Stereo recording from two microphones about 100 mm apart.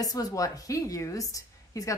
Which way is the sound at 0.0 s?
40° left (ahead or behind).